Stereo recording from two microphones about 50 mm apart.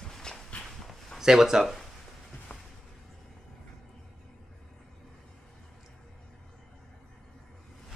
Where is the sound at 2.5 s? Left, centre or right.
Left.